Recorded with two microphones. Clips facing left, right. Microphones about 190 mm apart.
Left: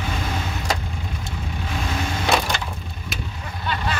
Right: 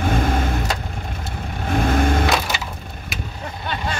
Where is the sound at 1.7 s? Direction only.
55° right (ahead or behind).